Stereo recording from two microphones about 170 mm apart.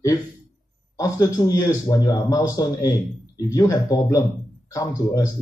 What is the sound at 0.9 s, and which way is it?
Speech, 20° left (ahead or behind).